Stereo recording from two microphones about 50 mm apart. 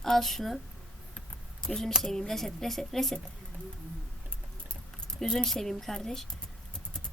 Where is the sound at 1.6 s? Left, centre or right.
Centre.